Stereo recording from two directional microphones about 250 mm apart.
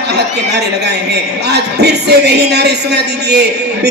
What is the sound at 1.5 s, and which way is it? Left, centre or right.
A man's voice, right.